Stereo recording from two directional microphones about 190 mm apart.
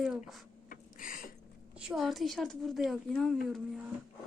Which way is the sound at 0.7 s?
45° left (ahead or behind).